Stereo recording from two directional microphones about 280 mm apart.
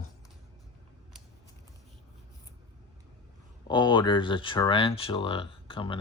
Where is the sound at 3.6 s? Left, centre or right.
Centre.